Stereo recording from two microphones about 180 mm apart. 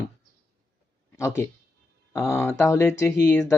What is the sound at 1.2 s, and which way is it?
Speech, 15° left (ahead or behind).